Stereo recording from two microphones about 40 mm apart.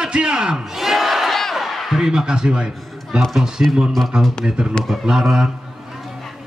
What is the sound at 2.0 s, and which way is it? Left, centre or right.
Speech, centre.